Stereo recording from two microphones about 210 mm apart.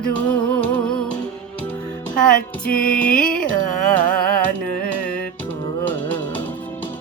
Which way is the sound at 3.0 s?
40° left (ahead or behind).